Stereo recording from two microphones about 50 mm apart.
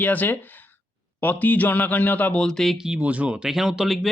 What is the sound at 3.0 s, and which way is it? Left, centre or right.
Speech, right.